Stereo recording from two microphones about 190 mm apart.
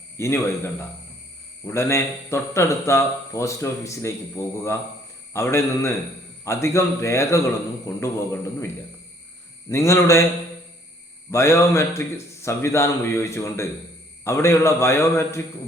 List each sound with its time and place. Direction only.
0.2 s speech: 15° left (ahead or behind)
9.6 s speech: 15° left (ahead or behind)
11.3 s speech: 15° left (ahead or behind)